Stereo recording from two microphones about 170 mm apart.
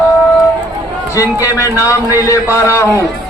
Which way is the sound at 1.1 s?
20° left (ahead or behind).